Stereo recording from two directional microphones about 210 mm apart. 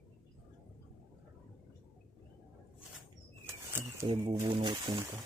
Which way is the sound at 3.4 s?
15° right (ahead or behind).